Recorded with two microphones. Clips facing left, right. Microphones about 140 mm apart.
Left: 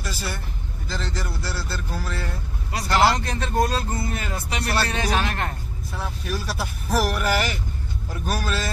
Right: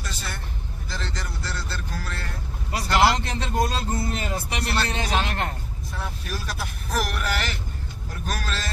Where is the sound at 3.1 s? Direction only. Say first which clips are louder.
Left 2 dB; 25° right (ahead or behind).